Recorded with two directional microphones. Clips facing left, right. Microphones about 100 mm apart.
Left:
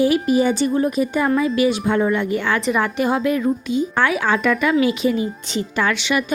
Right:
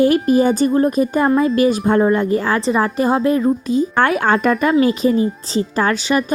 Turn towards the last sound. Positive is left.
turn(degrees=-40)  # may be behind; listen again after turning